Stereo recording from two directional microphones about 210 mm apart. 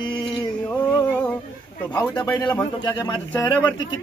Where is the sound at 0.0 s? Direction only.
25° left (ahead or behind).